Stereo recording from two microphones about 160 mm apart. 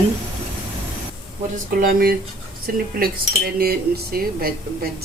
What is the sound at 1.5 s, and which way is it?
A woman's voice, 65° right (ahead or behind).